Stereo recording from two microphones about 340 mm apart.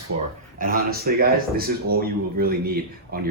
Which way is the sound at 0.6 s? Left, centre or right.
Right.